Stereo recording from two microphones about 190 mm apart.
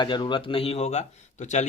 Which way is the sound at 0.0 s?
25° left (ahead or behind).